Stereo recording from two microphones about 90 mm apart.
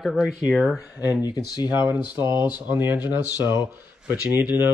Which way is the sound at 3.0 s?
45° left (ahead or behind).